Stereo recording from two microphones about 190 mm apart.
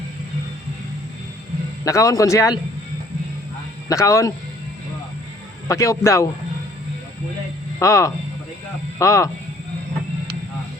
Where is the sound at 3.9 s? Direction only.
15° left (ahead or behind).